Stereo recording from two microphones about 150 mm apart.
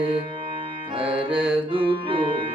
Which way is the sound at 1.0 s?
5° right (ahead or behind).